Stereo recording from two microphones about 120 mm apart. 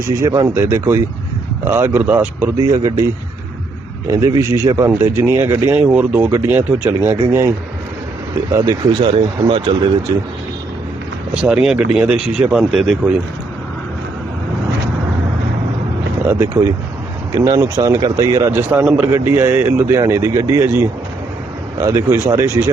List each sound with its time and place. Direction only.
0.2 s speech: 30° right (ahead or behind)
2.6 s speech: 30° right (ahead or behind)
4.1 s speech: 25° right (ahead or behind)
8.5 s speech: 35° right (ahead or behind)
11.4 s speech: 5° right (ahead or behind)
16.2 s speech: 20° right (ahead or behind)
18.7 s speech: 15° right (ahead or behind)